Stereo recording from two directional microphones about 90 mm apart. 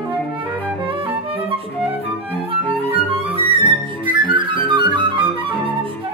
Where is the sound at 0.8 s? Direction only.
80° right.